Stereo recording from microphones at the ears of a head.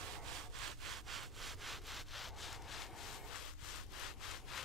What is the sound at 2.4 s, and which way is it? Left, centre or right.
Rub, left.